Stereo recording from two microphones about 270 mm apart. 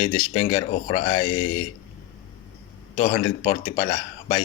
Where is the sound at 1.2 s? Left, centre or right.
Left.